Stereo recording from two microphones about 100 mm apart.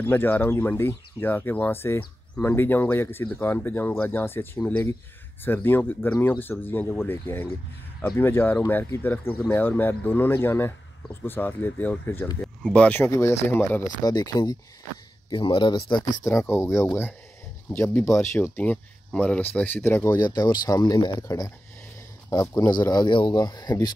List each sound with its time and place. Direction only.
0.0 s speech: 20° left (ahead or behind)
13.0 s speech: 25° left (ahead or behind)
14.0 s speech: 40° left (ahead or behind)
15.2 s speech: 55° left (ahead or behind)
16.3 s speech: 25° left (ahead or behind)
17.9 s speech: 30° left (ahead or behind)
18.6 s speech: 15° left (ahead or behind)
20.1 s speech: 40° left (ahead or behind)
22.3 s speech: 35° left (ahead or behind)